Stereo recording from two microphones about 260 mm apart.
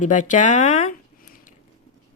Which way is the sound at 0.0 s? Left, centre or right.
Left.